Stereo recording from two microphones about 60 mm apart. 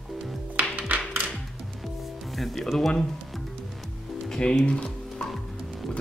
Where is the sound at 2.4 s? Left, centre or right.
Centre.